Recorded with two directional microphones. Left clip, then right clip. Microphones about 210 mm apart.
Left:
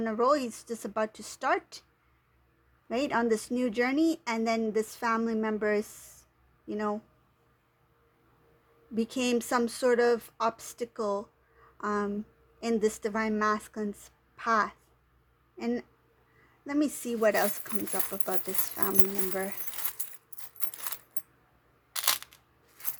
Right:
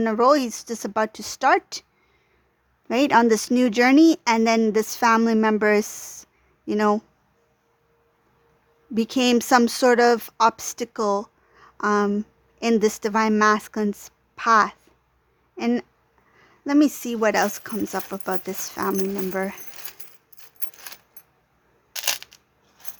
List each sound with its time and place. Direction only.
0.0 s speech: 30° right (ahead or behind)
2.9 s speech: 35° right (ahead or behind)
9.0 s speech: 30° right (ahead or behind)
21.9 s single-lens reflex camera: 15° right (ahead or behind)